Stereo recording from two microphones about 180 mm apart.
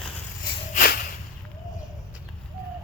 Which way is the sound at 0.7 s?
55° left (ahead or behind).